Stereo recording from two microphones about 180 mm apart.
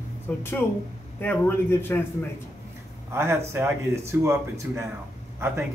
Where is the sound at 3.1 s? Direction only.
15° right (ahead or behind).